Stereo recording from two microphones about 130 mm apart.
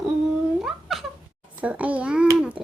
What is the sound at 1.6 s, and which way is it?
Speech, 10° right (ahead or behind).